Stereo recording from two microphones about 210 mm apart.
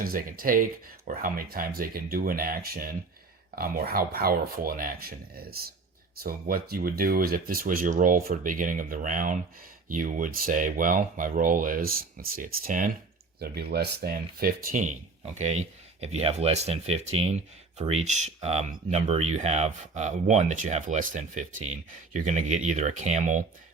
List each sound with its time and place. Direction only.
0.0 s speech: 45° right (ahead or behind)